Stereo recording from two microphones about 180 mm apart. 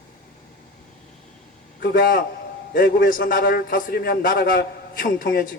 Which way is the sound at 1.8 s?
50° left (ahead or behind).